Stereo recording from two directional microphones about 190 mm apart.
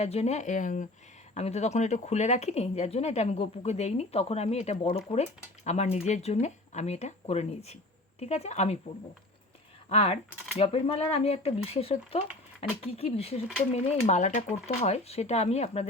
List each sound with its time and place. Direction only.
0.0 s speech: 35° left (ahead or behind)
9.9 s speech: 35° left (ahead or behind)